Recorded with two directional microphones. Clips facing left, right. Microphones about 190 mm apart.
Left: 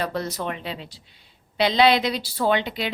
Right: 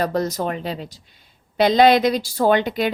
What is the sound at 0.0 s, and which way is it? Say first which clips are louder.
A woman's voice: right 6 dB; 45° right (ahead or behind).